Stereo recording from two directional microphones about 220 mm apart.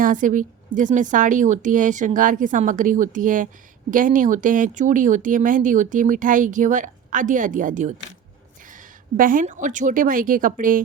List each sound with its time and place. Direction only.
0.0 s speech: 35° right (ahead or behind)
9.1 s speech: 40° right (ahead or behind)